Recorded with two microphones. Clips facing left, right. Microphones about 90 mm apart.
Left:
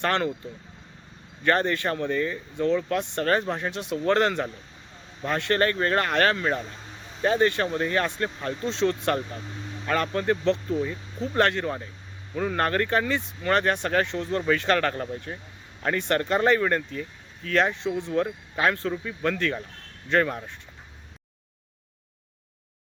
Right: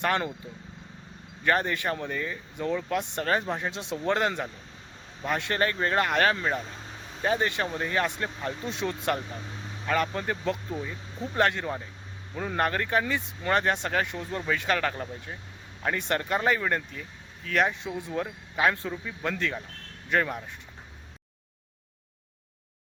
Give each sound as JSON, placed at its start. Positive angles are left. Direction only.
{"t": 0.0, "sound": "speech", "side_deg": -15}
{"t": 1.5, "sound": "speech", "side_deg": -10}
{"t": 16.0, "sound": "speech", "side_deg": -15}